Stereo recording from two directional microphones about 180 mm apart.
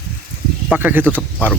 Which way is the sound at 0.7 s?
10° right (ahead or behind).